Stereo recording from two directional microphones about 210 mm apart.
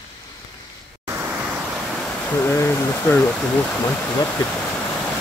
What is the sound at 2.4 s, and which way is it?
Speech, 10° left (ahead or behind).